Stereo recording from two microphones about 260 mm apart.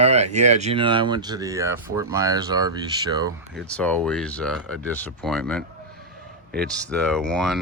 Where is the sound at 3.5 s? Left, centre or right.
Centre.